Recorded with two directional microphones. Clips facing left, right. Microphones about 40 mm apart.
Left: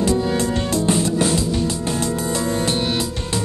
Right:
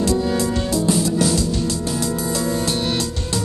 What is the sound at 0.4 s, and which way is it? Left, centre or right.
Music, left.